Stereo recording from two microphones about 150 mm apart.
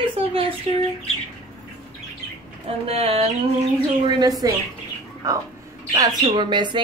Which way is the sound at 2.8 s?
45° right (ahead or behind).